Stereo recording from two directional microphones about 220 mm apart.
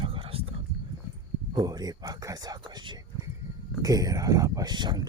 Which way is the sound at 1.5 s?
20° right (ahead or behind).